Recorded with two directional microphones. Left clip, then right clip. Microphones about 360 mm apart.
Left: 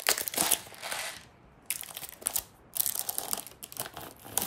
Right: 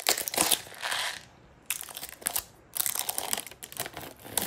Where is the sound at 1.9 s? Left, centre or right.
Centre.